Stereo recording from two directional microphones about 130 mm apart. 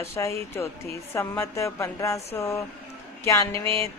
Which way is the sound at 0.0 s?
20° left (ahead or behind).